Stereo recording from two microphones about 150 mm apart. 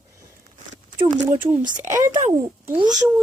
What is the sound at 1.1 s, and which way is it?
A child's voice, 50° right (ahead or behind).